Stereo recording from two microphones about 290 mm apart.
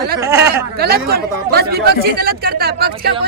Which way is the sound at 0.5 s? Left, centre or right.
Right.